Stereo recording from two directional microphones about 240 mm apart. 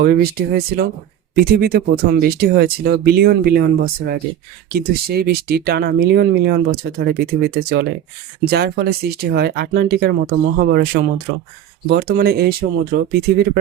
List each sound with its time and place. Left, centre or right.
0.0 s speech: right